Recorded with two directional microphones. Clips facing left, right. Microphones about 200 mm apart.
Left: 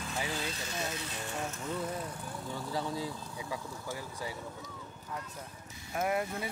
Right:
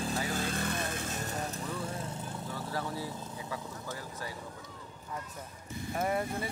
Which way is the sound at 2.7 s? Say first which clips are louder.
Left 2 dB; 15° left (ahead or behind).